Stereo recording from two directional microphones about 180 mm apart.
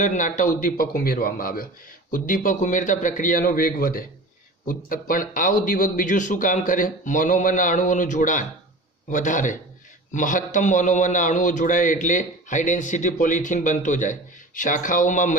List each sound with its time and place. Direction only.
0.0 s a man's voice: 45° left (ahead or behind)